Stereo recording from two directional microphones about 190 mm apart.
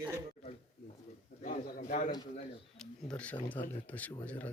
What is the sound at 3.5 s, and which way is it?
Speech, 10° left (ahead or behind).